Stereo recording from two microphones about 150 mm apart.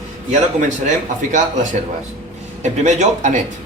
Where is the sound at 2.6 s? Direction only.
50° right (ahead or behind).